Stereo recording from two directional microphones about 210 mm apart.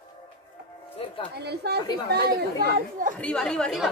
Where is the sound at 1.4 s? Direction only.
50° right (ahead or behind).